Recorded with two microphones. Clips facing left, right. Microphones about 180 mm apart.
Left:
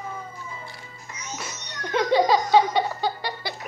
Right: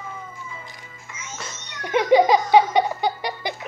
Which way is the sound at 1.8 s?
15° right (ahead or behind).